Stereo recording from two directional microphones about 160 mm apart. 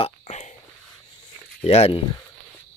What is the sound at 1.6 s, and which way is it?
Speech, 40° left (ahead or behind).